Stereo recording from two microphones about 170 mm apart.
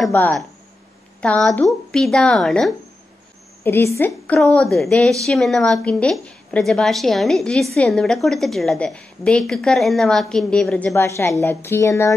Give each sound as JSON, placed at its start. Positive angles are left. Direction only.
{"t": 0.1, "sound": "a woman's voice", "side_deg": 10}
{"t": 3.6, "sound": "speech", "side_deg": 15}
{"t": 4.4, "sound": "a woman's voice", "side_deg": 5}
{"t": 10.9, "sound": "speech", "side_deg": 15}